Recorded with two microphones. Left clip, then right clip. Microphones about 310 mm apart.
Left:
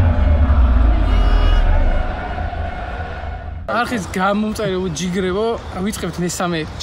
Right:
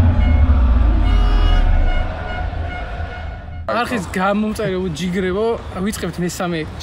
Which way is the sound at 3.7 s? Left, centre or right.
Centre.